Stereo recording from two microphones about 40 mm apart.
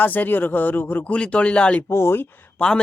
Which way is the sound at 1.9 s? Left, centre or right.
Left.